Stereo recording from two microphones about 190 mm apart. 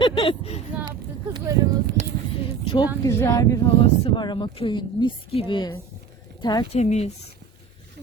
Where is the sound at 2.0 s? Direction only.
35° right (ahead or behind).